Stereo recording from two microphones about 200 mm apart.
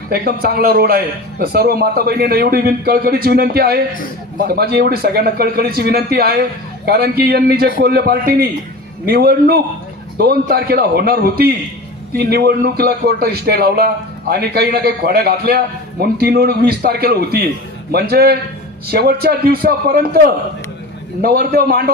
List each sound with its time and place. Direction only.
0.1 s speech: 50° right (ahead or behind)